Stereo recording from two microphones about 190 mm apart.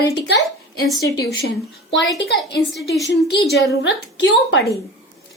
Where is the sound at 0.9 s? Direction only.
20° left (ahead or behind).